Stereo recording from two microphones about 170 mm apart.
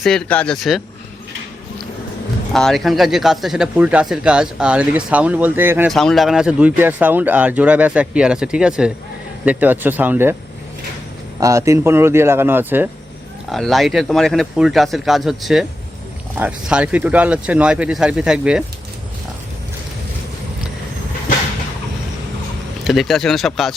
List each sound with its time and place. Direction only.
0.0 s speech: 5° left (ahead or behind)
2.5 s speech: centre (ahead or behind)
5.9 s speech: centre (ahead or behind)
11.3 s speech: 20° right (ahead or behind)
13.5 s speech: centre (ahead or behind)
22.8 s speech: centre (ahead or behind)